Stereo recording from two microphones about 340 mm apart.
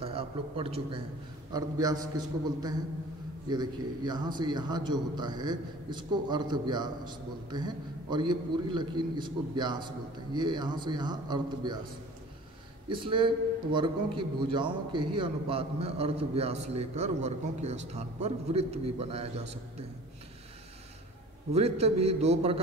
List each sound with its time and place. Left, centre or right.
0.0 s a man's voice: centre
3.4 s a man's voice: centre
12.8 s a man's voice: centre
21.5 s a man's voice: centre